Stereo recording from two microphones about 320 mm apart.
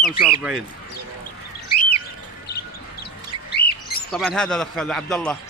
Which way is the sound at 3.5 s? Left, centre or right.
Left.